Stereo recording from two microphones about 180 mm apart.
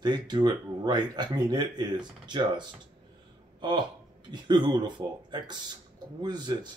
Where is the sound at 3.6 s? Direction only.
25° right (ahead or behind).